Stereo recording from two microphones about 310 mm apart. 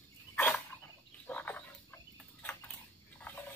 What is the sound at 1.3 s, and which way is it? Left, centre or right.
Frog, centre.